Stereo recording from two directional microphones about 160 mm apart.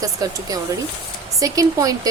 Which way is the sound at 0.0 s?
20° right (ahead or behind).